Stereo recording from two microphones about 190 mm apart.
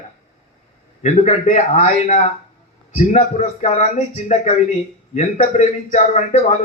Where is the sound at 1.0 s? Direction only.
40° left (ahead or behind).